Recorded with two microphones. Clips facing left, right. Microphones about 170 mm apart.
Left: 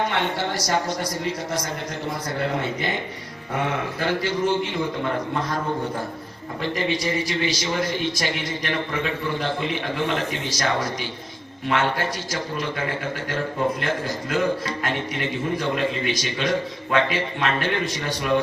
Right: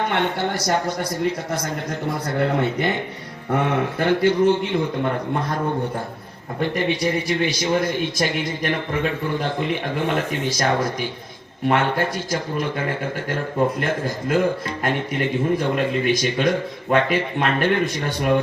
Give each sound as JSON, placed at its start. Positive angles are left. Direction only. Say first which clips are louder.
{"t": 0.1, "sound": "speech", "louder": "right 3 dB", "side_deg": -55}
{"t": 3.9, "sound": "speech", "louder": "right 9 dB", "side_deg": -55}
{"t": 6.6, "sound": "a man's voice", "louder": "right 3 dB", "side_deg": -55}
{"t": 13.7, "sound": "a man's voice", "louder": "right 2 dB", "side_deg": -50}